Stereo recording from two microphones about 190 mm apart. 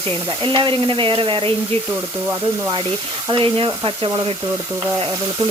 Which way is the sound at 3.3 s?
25° right (ahead or behind).